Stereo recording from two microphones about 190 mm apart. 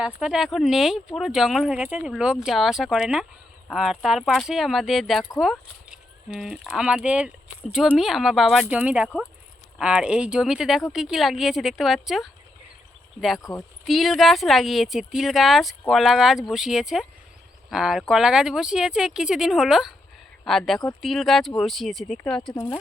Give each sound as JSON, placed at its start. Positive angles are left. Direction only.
{"t": 0.0, "sound": "speech", "side_deg": -5}
{"t": 13.4, "sound": "speech", "side_deg": 20}
{"t": 13.8, "sound": "speech", "side_deg": 0}